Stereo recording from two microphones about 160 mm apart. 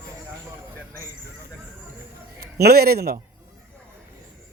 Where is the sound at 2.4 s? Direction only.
80° right.